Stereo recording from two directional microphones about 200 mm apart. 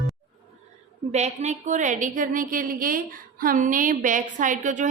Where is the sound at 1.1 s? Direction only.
35° right (ahead or behind).